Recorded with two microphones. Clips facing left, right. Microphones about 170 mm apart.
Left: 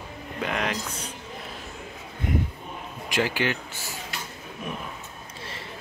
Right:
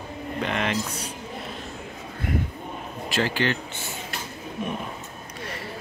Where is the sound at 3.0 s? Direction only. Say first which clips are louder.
Right 1 dB; 15° left (ahead or behind).